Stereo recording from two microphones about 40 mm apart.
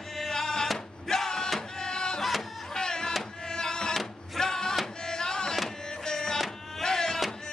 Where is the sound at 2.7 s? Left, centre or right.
Centre.